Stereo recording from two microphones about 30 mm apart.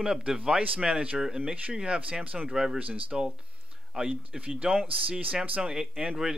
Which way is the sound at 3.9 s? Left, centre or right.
Right.